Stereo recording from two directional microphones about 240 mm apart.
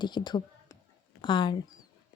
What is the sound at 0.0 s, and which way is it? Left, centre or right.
A woman's voice, centre.